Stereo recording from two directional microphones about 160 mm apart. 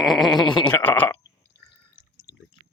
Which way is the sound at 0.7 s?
10° left (ahead or behind).